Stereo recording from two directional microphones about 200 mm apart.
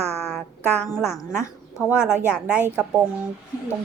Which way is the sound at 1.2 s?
15° left (ahead or behind).